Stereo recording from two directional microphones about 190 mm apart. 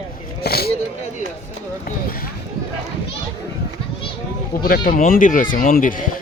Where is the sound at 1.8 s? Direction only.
50° left (ahead or behind).